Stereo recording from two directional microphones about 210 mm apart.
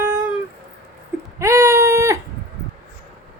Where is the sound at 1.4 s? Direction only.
15° right (ahead or behind).